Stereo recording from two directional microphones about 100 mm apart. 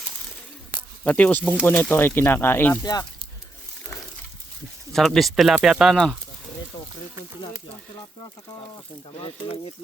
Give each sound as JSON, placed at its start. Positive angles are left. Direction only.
{"t": 1.0, "sound": "speech", "side_deg": 15}
{"t": 4.9, "sound": "speech", "side_deg": 5}
{"t": 6.7, "sound": "a sound", "side_deg": 40}
{"t": 9.1, "sound": "speech", "side_deg": 75}